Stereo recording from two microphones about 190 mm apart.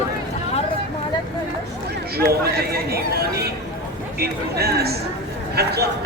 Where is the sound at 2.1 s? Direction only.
55° right (ahead or behind).